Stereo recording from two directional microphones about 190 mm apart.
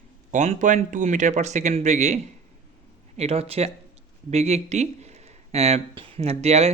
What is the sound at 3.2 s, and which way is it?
Speech, 30° right (ahead or behind).